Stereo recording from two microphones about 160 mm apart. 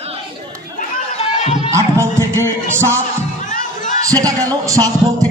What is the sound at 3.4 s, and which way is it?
Crowd, 50° left (ahead or behind).